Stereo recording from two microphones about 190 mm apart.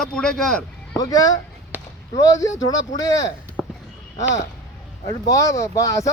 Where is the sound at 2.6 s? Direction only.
90° left.